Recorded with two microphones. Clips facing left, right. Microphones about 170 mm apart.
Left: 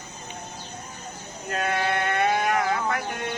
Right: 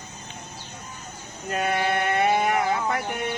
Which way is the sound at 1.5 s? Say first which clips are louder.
Right 1 dB; 20° right (ahead or behind).